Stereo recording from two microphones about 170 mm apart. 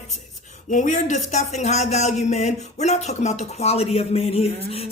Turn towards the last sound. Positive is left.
turn(degrees=35)  # may be behind; listen again after turning